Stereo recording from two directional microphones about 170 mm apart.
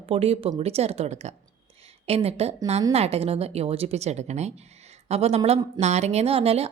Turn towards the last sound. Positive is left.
turn(degrees=-35)  # may be behind; listen again after turning